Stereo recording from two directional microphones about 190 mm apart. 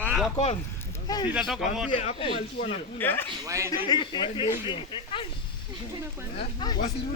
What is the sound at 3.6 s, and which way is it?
Speech, 20° left (ahead or behind).